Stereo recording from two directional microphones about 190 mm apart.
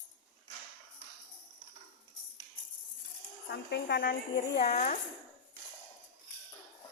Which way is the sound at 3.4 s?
65° left (ahead or behind).